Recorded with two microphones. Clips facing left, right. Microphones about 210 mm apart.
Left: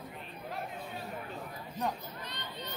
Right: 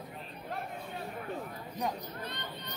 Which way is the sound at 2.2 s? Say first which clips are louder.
Right 2 dB; 55° right (ahead or behind).